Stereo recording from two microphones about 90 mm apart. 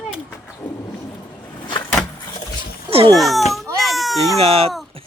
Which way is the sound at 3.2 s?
Centre (ahead or behind).